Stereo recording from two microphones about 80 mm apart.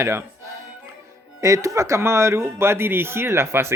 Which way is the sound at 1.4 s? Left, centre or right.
Right.